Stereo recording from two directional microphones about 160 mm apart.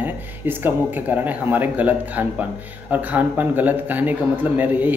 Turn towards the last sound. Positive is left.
turn(degrees=-10)  # may be behind; listen again after turning